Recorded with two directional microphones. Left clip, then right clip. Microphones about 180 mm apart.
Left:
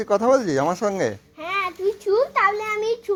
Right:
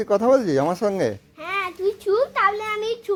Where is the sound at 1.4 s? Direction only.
25° right (ahead or behind).